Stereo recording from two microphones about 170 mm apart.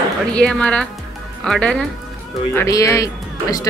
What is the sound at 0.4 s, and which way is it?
Speech, 5° left (ahead or behind).